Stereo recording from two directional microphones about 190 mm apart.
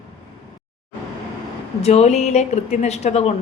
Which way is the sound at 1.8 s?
35° left (ahead or behind).